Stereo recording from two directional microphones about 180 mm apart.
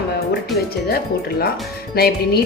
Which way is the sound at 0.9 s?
60° left (ahead or behind).